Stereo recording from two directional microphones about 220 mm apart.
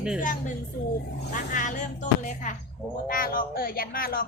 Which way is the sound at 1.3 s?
35° left (ahead or behind).